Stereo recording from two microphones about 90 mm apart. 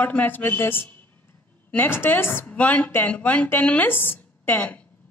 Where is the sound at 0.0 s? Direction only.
20° left (ahead or behind).